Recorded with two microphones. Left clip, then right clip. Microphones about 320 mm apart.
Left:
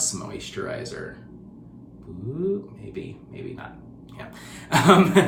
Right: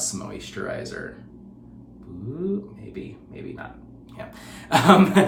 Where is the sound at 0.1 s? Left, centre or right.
Centre.